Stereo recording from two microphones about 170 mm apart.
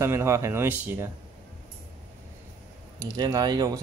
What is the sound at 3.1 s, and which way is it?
Speech, 20° right (ahead or behind).